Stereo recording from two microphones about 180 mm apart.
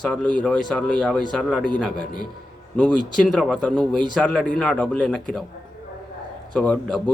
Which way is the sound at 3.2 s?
Centre (ahead or behind).